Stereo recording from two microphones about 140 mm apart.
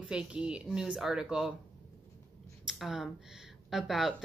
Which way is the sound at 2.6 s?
5° right (ahead or behind).